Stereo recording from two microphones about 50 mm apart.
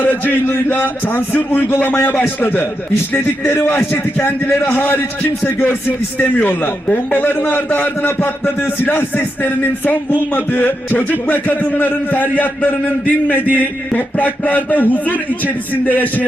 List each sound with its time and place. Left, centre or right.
0.0 s a man's voice: left
3.6 s a man's voice: left
4.6 s a man's voice: left